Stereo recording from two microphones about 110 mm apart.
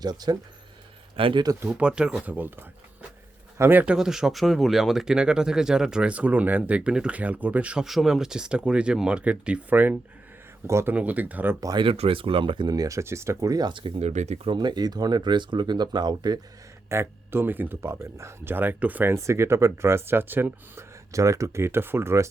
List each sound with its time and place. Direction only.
0.0 s speech: 40° right (ahead or behind)
1.1 s speech: 50° right (ahead or behind)
1.6 s speech: 10° right (ahead or behind)
3.9 s speech: 5° right (ahead or behind)
10.7 s speech: 25° right (ahead or behind)
10.9 s speech: 15° right (ahead or behind)
11.8 s speech: 55° right (ahead or behind)
14.0 s speech: 90° right
14.5 s speech: 40° right (ahead or behind)
16.9 s speech: 20° right (ahead or behind)
19.1 s speech: 25° right (ahead or behind)